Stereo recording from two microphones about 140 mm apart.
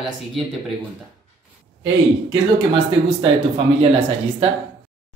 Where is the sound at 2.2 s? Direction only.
40° right (ahead or behind).